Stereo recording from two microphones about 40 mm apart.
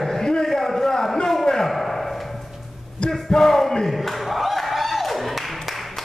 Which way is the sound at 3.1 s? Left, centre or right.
Centre.